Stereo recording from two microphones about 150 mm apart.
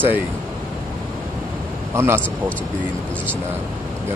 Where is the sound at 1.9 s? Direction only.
15° right (ahead or behind).